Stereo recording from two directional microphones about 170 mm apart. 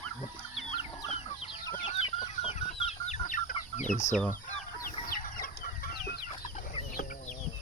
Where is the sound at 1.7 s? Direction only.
40° left (ahead or behind).